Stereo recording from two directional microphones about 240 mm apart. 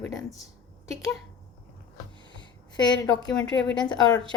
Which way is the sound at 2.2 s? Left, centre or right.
Centre.